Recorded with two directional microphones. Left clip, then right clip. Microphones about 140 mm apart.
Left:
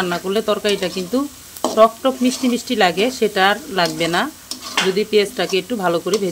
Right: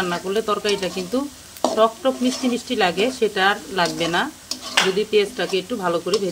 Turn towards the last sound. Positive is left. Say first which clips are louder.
# left 3 dB
turn(degrees=35)  # may be behind; listen again after turning